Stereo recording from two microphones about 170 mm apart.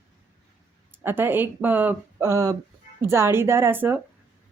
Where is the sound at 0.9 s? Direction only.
10° right (ahead or behind).